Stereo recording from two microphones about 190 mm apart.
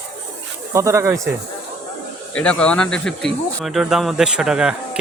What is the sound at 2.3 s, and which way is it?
Speech, 5° left (ahead or behind).